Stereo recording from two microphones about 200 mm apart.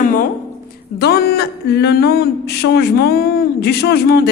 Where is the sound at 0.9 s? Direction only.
55° left (ahead or behind).